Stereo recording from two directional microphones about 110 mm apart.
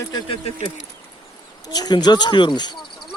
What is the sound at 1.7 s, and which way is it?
Speech, 40° left (ahead or behind).